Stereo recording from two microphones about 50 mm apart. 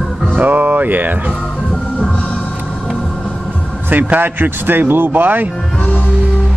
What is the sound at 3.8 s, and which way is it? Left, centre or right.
Speech, right.